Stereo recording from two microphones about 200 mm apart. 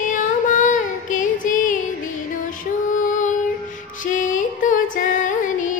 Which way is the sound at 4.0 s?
40° left (ahead or behind).